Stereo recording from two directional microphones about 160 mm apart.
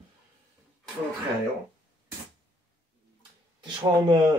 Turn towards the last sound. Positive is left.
turn(degrees=-25)  # may be behind; listen again after turning